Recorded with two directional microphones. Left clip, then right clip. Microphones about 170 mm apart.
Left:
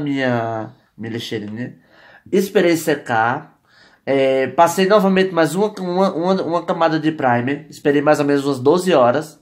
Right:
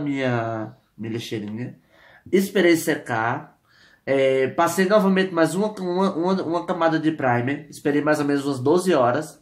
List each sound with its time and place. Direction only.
0.0 s speech: 30° left (ahead or behind)